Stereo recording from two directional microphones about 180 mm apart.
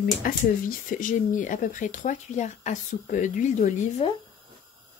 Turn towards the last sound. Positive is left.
turn(degrees=40)  # may be behind; listen again after turning